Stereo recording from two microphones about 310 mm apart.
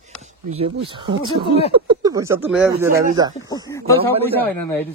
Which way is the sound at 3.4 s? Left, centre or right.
Centre.